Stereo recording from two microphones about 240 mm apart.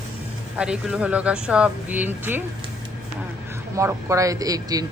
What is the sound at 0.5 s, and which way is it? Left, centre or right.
A woman's voice, centre.